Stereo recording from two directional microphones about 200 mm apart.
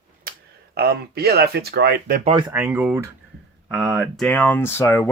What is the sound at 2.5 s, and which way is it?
Speech, 10° right (ahead or behind).